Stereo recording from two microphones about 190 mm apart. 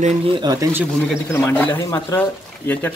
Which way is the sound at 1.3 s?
10° left (ahead or behind).